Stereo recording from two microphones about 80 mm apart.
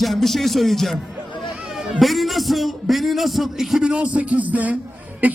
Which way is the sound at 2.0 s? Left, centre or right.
Centre.